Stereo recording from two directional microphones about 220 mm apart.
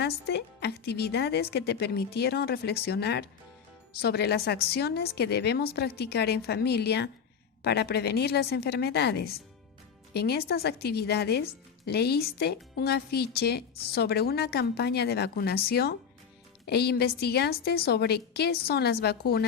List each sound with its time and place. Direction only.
0.0 s a woman's voice: 50° left (ahead or behind)